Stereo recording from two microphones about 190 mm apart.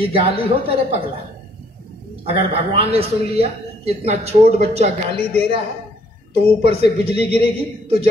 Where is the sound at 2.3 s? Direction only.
30° right (ahead or behind).